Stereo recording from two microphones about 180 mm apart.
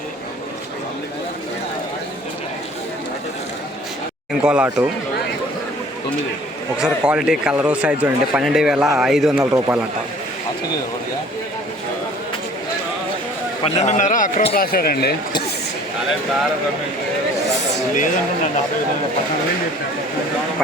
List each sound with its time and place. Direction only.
4.4 s speech: 10° right (ahead or behind)
6.7 s a man's voice: 5° right (ahead or behind)
9.4 s speech: 15° right (ahead or behind)
13.7 s a man's voice: 40° left (ahead or behind); by 15.1 s 55° left (ahead or behind)
17.9 s a man's voice: 45° left (ahead or behind)